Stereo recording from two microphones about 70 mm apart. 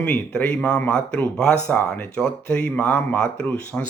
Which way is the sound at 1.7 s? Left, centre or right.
Left.